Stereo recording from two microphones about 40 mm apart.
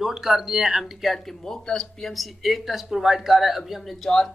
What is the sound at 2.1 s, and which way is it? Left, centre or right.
Speech, centre.